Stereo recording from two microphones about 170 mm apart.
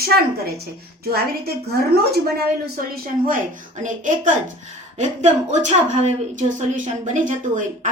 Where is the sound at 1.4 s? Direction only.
65° right (ahead or behind).